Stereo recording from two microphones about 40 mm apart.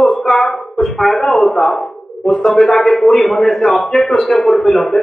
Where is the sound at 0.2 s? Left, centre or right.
Centre.